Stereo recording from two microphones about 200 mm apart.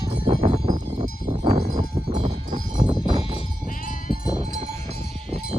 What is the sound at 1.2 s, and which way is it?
Cowbell, 25° right (ahead or behind).